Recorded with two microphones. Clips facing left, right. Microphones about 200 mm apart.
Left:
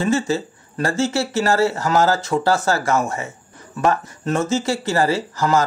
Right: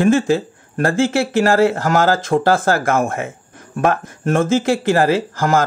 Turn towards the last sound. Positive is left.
turn(degrees=-50)  # may be behind; listen again after turning